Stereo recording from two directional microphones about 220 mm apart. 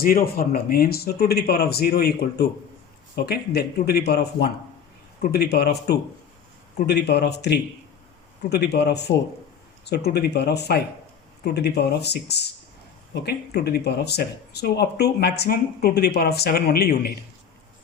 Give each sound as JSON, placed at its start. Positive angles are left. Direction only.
{"t": 0.0, "sound": "speech", "side_deg": 40}